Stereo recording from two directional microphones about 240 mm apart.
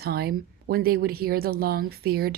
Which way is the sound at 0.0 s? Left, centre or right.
Right.